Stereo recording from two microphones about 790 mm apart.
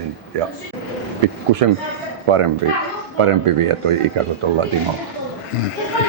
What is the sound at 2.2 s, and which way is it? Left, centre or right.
Speech, right.